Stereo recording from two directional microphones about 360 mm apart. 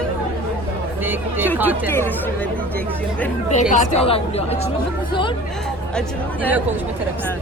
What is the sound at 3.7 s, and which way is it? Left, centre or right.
Speech, centre.